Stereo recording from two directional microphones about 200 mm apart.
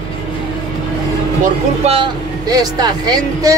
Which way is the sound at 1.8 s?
25° right (ahead or behind).